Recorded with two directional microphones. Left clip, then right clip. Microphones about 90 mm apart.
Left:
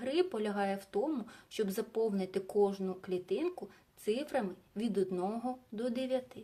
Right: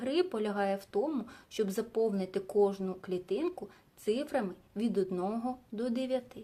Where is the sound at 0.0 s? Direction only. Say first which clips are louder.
Right 2 dB; 20° right (ahead or behind).